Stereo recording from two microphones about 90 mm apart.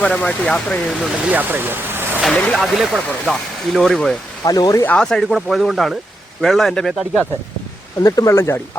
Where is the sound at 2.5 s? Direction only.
Centre (ahead or behind).